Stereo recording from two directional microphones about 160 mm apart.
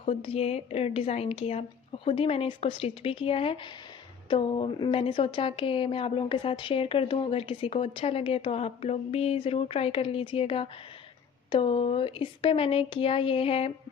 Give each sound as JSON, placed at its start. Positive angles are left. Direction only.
{"t": 0.0, "sound": "a woman's voice", "side_deg": 35}